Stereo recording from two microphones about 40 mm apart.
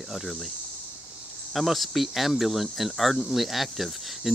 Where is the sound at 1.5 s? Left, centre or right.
Centre.